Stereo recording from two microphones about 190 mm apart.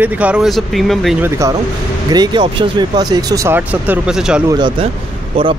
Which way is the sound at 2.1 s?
25° right (ahead or behind).